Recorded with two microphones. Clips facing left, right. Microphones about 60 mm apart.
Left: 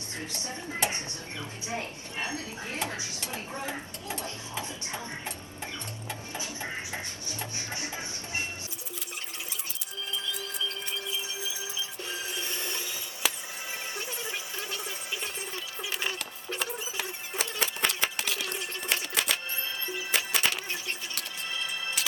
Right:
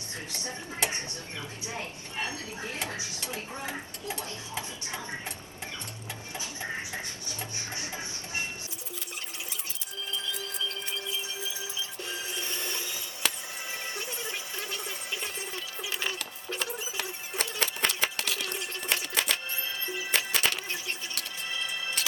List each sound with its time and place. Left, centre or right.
0.3 s speech: left
2.3 s speech: left
7.7 s music: left
12.0 s a sound: centre
19.9 s music: centre